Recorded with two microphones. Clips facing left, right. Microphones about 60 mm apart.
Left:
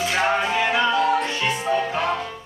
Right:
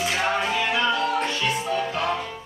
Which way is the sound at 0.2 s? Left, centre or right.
Centre.